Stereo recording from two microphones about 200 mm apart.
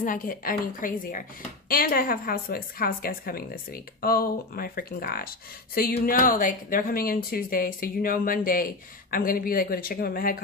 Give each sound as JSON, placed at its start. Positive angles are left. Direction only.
{"t": 0.0, "sound": "speech", "side_deg": 45}